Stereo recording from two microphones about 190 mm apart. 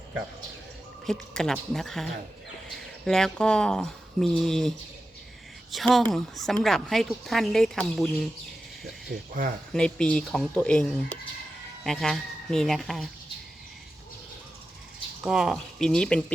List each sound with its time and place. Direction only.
1.0 s speech: centre (ahead or behind)
5.7 s speech: centre (ahead or behind)
8.8 s speech: 50° right (ahead or behind)
9.7 s speech: 5° left (ahead or behind)
15.2 s speech: 5° right (ahead or behind)